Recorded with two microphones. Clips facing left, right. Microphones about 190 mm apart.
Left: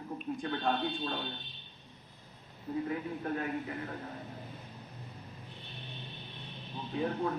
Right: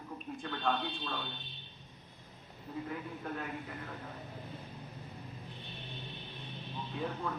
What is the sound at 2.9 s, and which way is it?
Speech, 50° left (ahead or behind).